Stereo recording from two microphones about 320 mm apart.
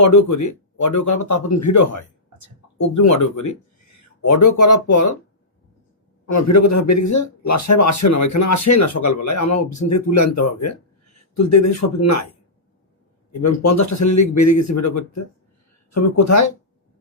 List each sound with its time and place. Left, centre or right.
0.0 s speech: left
6.2 s speech: left
13.4 s speech: left